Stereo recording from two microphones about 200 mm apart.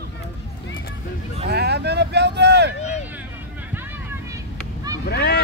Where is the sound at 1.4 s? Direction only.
55° right (ahead or behind).